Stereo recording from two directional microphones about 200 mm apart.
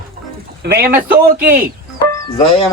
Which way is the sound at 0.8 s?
50° right (ahead or behind).